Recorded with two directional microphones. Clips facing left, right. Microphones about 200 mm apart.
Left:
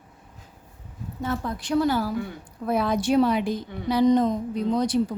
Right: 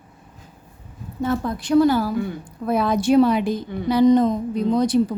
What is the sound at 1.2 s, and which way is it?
A woman's voice, 45° right (ahead or behind).